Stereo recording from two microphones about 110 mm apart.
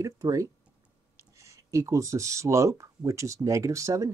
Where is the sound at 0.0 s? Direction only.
30° right (ahead or behind).